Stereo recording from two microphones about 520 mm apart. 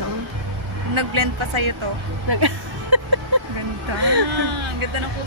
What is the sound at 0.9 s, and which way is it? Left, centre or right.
Speech, right.